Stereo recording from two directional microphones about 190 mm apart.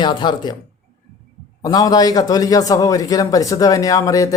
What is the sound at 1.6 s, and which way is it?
A man's voice, 20° left (ahead or behind).